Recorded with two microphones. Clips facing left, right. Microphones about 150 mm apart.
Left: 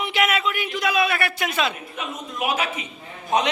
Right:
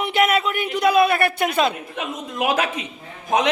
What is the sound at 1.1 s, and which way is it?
Speech, 50° right (ahead or behind).